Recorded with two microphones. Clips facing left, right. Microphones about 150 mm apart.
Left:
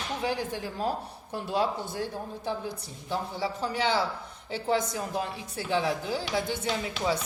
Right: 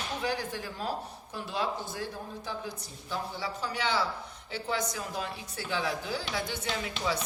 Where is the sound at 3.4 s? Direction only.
25° left (ahead or behind).